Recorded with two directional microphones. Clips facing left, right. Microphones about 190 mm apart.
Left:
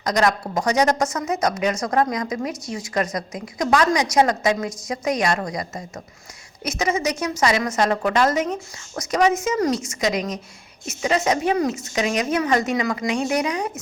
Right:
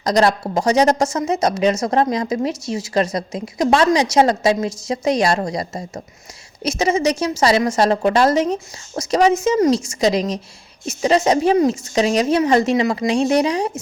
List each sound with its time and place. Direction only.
0.0 s a woman's voice: 30° right (ahead or behind)